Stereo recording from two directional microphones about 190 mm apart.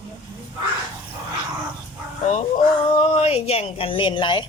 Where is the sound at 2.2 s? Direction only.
40° left (ahead or behind).